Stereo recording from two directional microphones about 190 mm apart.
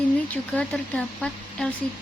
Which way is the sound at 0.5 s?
5° left (ahead or behind).